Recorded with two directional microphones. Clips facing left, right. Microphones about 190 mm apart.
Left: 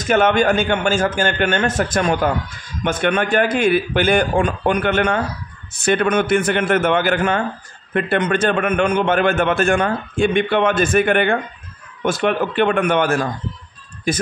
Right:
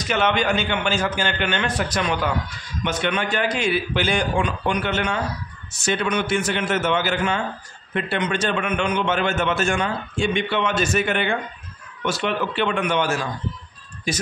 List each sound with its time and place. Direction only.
0.0 s a man's voice: 50° left (ahead or behind)